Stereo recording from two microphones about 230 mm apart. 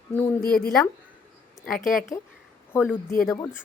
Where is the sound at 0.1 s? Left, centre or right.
Centre.